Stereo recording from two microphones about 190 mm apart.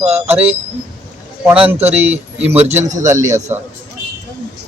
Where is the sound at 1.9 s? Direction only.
10° right (ahead or behind).